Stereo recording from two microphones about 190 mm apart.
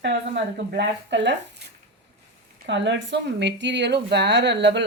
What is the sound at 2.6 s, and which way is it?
Speech, 70° right (ahead or behind).